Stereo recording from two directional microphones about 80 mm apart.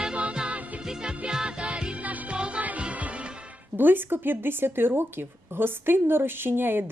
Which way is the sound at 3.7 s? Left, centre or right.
Right.